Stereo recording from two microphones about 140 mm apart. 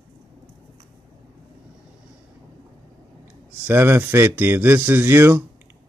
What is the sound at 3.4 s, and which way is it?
A man's voice, 15° right (ahead or behind).